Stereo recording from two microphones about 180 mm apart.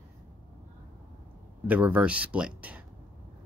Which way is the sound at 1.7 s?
10° right (ahead or behind).